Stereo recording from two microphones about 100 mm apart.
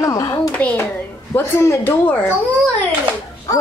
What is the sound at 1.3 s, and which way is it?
Speech, 25° left (ahead or behind).